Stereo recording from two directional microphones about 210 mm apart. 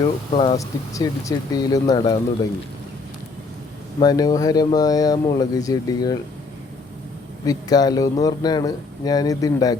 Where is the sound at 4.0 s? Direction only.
20° left (ahead or behind).